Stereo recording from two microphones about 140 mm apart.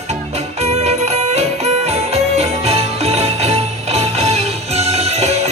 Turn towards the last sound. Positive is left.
turn(degrees=-50)  # may be behind; listen again after turning